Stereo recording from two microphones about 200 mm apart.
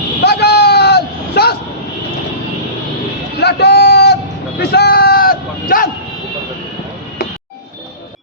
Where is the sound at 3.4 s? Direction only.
55° left (ahead or behind).